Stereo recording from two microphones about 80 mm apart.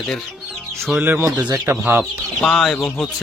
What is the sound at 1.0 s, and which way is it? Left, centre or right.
Speech, right.